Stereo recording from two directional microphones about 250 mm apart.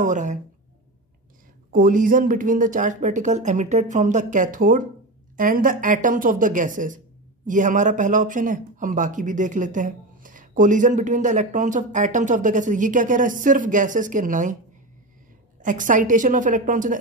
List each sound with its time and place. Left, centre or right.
0.0 s speech: right
1.7 s speech: right
15.6 s speech: right